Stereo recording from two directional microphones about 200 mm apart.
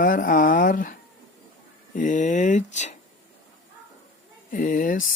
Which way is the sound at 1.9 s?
40° left (ahead or behind).